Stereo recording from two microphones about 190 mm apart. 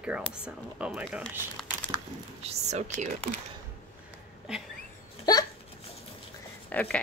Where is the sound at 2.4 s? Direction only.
35° right (ahead or behind).